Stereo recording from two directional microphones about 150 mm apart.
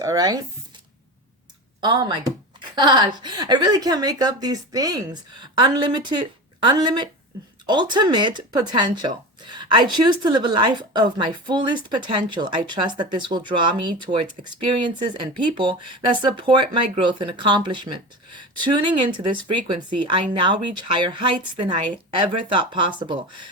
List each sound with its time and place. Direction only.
0.0 s speech: 25° right (ahead or behind)
1.8 s speech: 30° right (ahead or behind)